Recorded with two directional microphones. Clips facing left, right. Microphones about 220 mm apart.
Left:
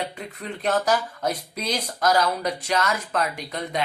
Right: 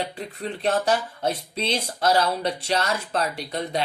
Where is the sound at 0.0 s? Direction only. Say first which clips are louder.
Right 2 dB; 30° right (ahead or behind).